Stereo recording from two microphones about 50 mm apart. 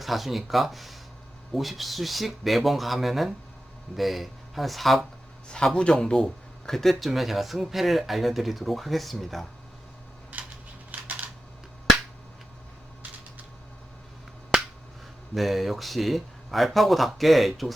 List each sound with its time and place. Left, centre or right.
0.0 s speech: centre
5.5 s speech: centre
10.3 s a sound: right
15.4 s speech: centre